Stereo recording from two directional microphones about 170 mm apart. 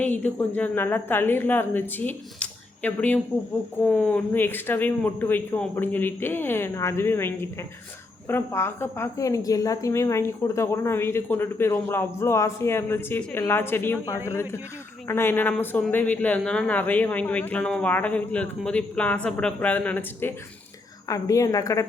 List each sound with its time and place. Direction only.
0.0 s a woman's voice: 10° left (ahead or behind)